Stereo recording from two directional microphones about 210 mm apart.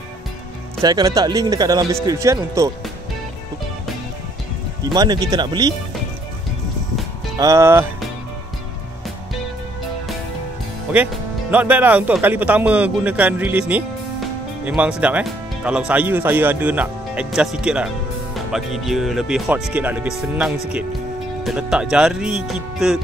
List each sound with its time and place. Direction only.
0.8 s speech: 15° right (ahead or behind)
4.9 s speech: 20° right (ahead or behind)
7.3 s speech: 15° right (ahead or behind)
10.9 s speech: 5° right (ahead or behind)